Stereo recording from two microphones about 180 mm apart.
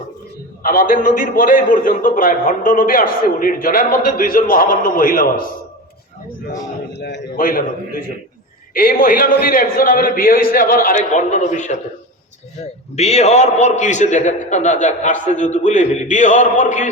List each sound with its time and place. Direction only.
0.6 s a man's voice: 50° left (ahead or behind)
6.9 s a man's voice: 70° left (ahead or behind)
7.3 s a man's voice: 50° left (ahead or behind)
13.0 s a man's voice: 35° left (ahead or behind)